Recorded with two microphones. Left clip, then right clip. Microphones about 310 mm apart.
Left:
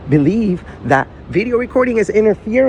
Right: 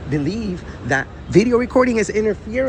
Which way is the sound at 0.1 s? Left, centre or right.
Centre.